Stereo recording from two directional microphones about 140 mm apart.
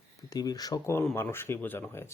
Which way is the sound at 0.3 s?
25° left (ahead or behind).